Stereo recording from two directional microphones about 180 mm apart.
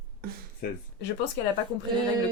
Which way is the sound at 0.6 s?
55° left (ahead or behind).